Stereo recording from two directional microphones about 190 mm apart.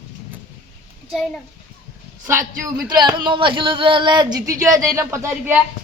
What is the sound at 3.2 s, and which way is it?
Speech, 25° right (ahead or behind).